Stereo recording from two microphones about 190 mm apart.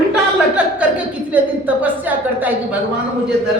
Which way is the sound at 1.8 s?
10° right (ahead or behind).